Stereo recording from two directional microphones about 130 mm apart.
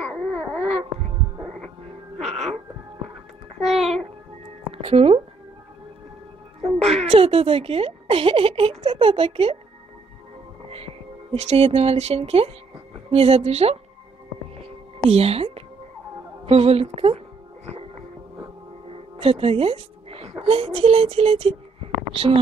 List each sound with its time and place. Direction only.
0.0 s babbling: 5° right (ahead or behind)
2.1 s a sound: centre (ahead or behind)
3.6 s a sound: centre (ahead or behind)
4.8 s speech: 45° right (ahead or behind)
7.0 s speech: 50° right (ahead or behind)
10.7 s speech: 50° right (ahead or behind)
15.0 s speech: 50° right (ahead or behind)
18.9 s music: 45° right (ahead or behind)
20.4 s speech: 45° right (ahead or behind)